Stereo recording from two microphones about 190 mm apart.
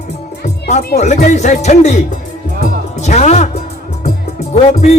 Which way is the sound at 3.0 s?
35° left (ahead or behind).